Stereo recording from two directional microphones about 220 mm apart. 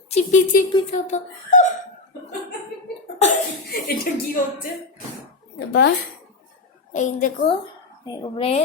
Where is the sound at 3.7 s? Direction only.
40° left (ahead or behind).